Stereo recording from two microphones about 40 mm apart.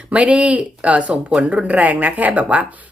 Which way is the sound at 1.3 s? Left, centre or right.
Right.